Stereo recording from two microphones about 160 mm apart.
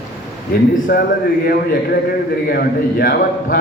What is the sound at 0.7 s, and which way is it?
A man's voice, 65° left (ahead or behind).